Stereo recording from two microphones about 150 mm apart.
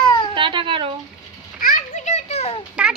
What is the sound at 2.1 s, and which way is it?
Children playing, 45° left (ahead or behind).